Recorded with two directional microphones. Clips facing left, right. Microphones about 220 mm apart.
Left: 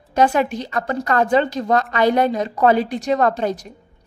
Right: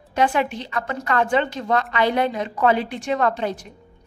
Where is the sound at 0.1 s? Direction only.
40° left (ahead or behind).